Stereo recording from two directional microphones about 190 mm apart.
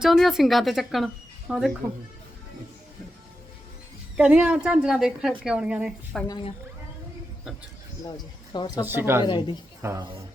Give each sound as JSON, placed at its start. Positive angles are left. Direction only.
{"t": 0.0, "sound": "speech", "side_deg": 0}
{"t": 4.2, "sound": "speech", "side_deg": -5}
{"t": 6.2, "sound": "speech", "side_deg": 20}
{"t": 8.0, "sound": "speech", "side_deg": 20}
{"t": 8.8, "sound": "speech", "side_deg": -10}
{"t": 9.2, "sound": "speech", "side_deg": 25}
{"t": 9.8, "sound": "speech", "side_deg": -15}